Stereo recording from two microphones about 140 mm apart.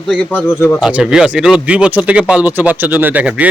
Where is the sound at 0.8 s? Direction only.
5° right (ahead or behind).